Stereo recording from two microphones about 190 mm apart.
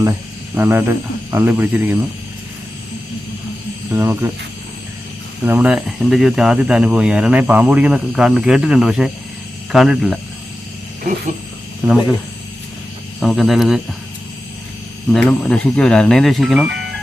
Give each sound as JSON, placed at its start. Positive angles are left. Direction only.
{"t": 0.5, "sound": "speech", "side_deg": -10}
{"t": 3.9, "sound": "speech", "side_deg": -10}
{"t": 5.5, "sound": "speech", "side_deg": -5}
{"t": 11.8, "sound": "speech", "side_deg": -5}
{"t": 13.1, "sound": "speech", "side_deg": 0}
{"t": 15.1, "sound": "speech", "side_deg": 5}